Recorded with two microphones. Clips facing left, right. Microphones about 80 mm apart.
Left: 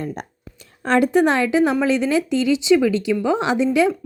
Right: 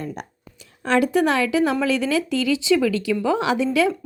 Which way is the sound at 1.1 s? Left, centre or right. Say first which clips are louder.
Left 3 dB; left.